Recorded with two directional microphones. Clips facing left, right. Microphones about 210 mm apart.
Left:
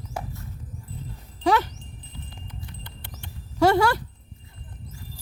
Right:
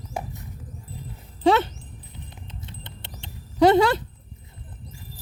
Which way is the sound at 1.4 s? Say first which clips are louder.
Right 3 dB; 25° right (ahead or behind).